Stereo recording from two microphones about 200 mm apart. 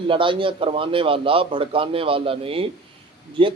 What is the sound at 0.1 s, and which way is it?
A man's voice, 25° right (ahead or behind).